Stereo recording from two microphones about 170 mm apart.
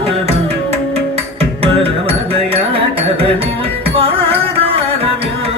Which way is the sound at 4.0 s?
35° right (ahead or behind).